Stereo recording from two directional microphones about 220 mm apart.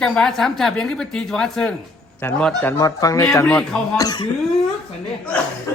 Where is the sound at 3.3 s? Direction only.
5° left (ahead or behind).